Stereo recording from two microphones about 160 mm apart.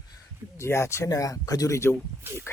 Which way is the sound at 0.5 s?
15° left (ahead or behind).